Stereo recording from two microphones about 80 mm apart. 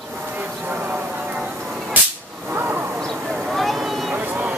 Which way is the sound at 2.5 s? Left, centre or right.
Right.